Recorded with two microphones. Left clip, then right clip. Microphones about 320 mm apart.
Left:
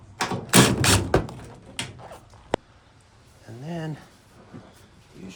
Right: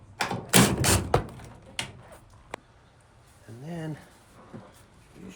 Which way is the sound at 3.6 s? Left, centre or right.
Centre.